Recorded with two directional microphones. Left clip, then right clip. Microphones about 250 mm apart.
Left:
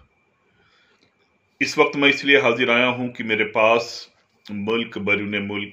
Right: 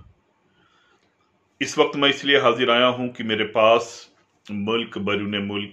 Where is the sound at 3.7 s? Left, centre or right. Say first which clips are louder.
Right 1 dB; centre.